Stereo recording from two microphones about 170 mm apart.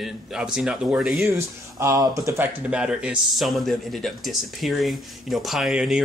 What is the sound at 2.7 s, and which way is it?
Speech, 5° right (ahead or behind).